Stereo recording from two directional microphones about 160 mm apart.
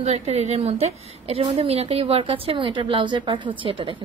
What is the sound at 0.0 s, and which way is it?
A woman's voice, 40° right (ahead or behind).